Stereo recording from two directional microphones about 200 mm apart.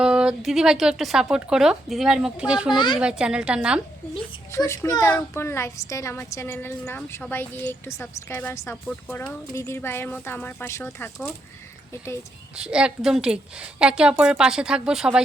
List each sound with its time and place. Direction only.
0.0 s speech: 5° right (ahead or behind)
2.7 s speech: 20° left (ahead or behind)
3.0 s speech: 5° right (ahead or behind)
4.5 s a woman's voice: 15° left (ahead or behind)
12.5 s speech: 5° right (ahead or behind)